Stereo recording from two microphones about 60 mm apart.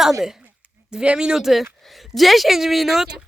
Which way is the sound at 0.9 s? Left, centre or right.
Centre.